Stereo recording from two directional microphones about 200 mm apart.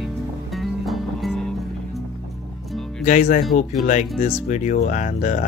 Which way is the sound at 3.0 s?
40° left (ahead or behind).